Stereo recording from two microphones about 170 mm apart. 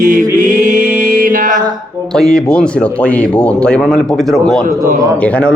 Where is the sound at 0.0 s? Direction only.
50° right (ahead or behind).